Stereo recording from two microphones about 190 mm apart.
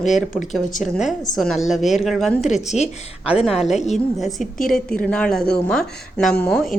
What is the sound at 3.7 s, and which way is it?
Speech, 35° left (ahead or behind).